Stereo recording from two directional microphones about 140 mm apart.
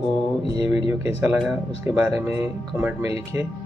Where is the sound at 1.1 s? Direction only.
10° right (ahead or behind).